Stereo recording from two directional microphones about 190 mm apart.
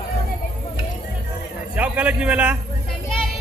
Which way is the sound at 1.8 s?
5° right (ahead or behind).